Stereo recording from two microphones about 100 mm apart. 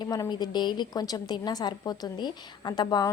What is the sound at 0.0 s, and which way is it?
A woman's voice, 45° left (ahead or behind).